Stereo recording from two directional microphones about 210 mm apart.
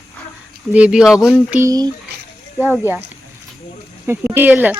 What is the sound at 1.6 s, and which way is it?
Speech, 20° right (ahead or behind).